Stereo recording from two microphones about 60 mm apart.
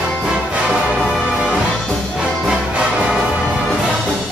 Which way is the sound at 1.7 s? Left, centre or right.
Centre.